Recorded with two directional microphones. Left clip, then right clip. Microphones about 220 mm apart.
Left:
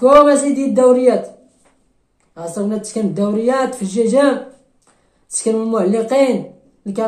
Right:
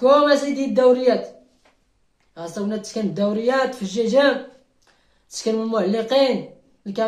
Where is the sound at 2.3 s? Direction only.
Centre (ahead or behind).